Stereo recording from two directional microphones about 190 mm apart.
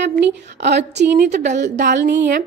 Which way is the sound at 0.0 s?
65° right (ahead or behind).